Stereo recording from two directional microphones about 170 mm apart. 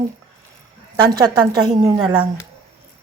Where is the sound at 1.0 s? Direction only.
25° right (ahead or behind).